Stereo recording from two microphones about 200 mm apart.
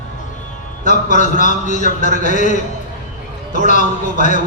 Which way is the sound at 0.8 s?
40° left (ahead or behind).